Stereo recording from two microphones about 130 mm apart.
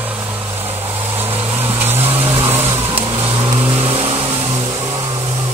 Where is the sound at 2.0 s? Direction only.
50° right (ahead or behind).